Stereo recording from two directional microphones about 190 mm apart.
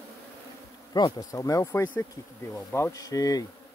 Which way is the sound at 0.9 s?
20° left (ahead or behind).